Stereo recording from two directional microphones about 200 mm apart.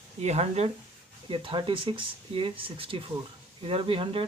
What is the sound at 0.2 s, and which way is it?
Speech, 35° right (ahead or behind).